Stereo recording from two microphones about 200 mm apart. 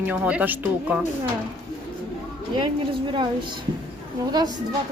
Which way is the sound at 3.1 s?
25° right (ahead or behind).